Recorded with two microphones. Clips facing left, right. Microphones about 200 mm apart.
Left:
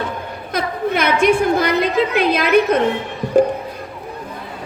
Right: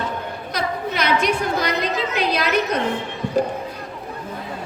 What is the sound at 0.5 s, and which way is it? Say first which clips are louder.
A woman's voice: left 5 dB; 50° left (ahead or behind).